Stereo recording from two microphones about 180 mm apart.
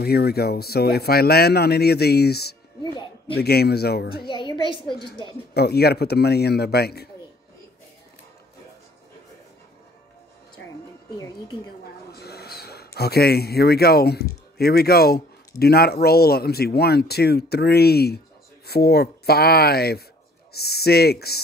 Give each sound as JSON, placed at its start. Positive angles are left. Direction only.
{"t": 0.0, "sound": "speech", "side_deg": 60}
{"t": 4.3, "sound": "a woman's voice", "side_deg": 25}
{"t": 5.5, "sound": "speech", "side_deg": 65}
{"t": 10.6, "sound": "music", "side_deg": 90}
{"t": 11.1, "sound": "a woman's voice", "side_deg": 20}
{"t": 12.1, "sound": "a man's voice", "side_deg": 60}